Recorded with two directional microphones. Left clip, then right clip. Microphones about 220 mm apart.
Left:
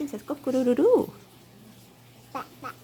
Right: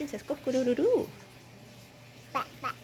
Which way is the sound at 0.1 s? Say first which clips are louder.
Left 2 dB; 40° left (ahead or behind).